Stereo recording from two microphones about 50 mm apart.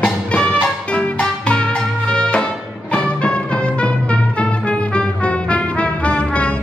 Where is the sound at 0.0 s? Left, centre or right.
Left.